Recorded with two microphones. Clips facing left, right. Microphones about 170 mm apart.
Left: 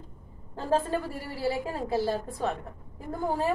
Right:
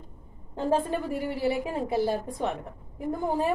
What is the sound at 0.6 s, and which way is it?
A woman's voice, 20° right (ahead or behind).